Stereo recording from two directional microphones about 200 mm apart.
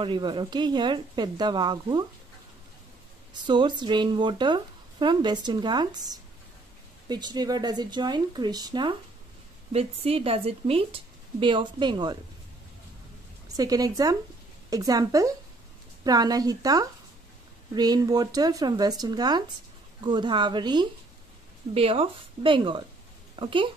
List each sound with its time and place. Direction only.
0.0 s speech: 25° right (ahead or behind)
3.4 s speech: 25° right (ahead or behind)
13.5 s a woman's voice: 15° right (ahead or behind)